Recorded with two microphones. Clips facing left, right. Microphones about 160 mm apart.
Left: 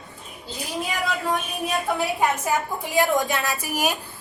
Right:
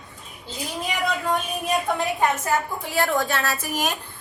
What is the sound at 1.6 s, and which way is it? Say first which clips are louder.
A woman's voice: even; 10° left (ahead or behind).